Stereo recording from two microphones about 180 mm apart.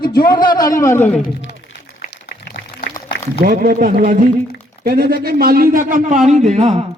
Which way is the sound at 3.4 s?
55° right (ahead or behind).